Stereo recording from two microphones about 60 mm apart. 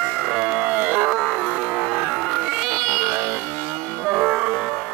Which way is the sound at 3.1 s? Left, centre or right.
Right.